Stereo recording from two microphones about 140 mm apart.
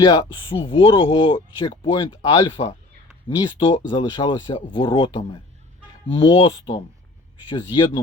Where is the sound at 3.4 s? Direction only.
35° left (ahead or behind).